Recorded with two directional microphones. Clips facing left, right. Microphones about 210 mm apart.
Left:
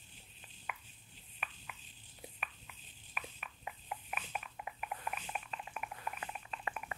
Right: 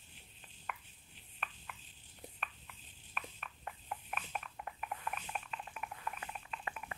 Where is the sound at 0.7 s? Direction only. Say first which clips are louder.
Right 1 dB; 5° left (ahead or behind).